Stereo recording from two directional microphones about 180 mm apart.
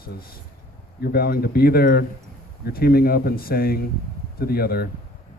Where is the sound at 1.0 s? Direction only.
60° left (ahead or behind).